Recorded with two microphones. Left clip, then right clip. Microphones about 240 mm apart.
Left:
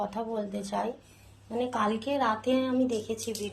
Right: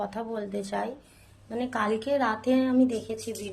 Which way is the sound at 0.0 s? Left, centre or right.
Centre.